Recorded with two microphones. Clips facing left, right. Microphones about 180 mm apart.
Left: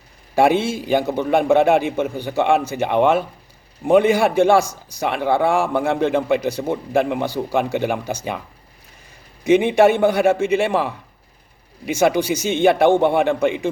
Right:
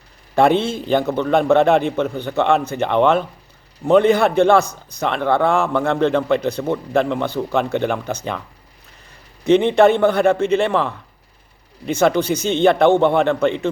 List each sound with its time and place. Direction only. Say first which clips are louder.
0.3 s a man's voice: right 1 dB; 10° left (ahead or behind)
4.6 s speech: even; 60° right (ahead or behind)
4.9 s a man's voice: right 1 dB; 10° left (ahead or behind)
9.5 s a man's voice: right 1 dB; 10° left (ahead or behind)
11.9 s a man's voice: right 1 dB; 10° left (ahead or behind)